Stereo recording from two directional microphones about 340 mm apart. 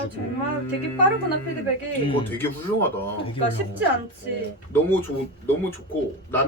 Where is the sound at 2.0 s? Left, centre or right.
Centre.